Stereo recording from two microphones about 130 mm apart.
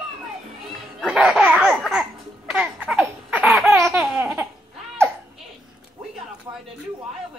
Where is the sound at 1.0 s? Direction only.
5° right (ahead or behind).